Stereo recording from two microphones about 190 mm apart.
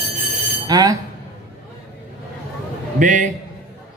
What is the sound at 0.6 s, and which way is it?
Speech, 20° right (ahead or behind).